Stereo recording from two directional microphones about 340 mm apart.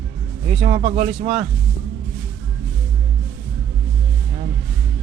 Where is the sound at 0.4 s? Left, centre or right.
Right.